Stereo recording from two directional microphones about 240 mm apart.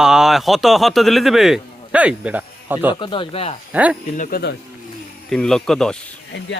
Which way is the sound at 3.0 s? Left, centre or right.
Left.